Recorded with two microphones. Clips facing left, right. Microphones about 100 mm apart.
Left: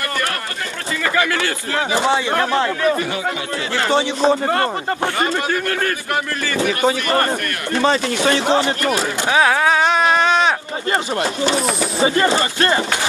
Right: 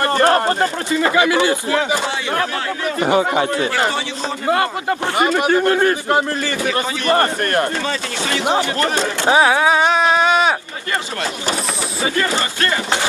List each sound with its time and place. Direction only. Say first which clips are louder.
0.0 s speech: right 9 dB; 35° right (ahead or behind)
0.9 s speech: right 4 dB; 20° right (ahead or behind)
3.1 s a man's voice: right 8 dB; 40° right (ahead or behind)
4.5 s a man's voice: right 1 dB; 15° right (ahead or behind); by 7.6 s 35° right (ahead or behind)
7.8 s speech: left 6 dB; 35° left (ahead or behind)
8.8 s speech: right 1 dB; 25° right (ahead or behind)
9.4 s a sound: even; 5° right (ahead or behind)
11.9 s speech: left 3 dB; 30° left (ahead or behind)